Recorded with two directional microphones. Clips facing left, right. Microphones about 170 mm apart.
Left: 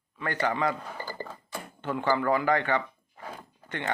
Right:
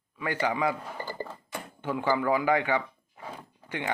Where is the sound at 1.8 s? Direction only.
10° right (ahead or behind).